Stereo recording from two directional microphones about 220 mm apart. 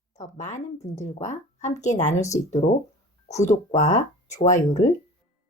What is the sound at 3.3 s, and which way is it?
Speech, 30° left (ahead or behind).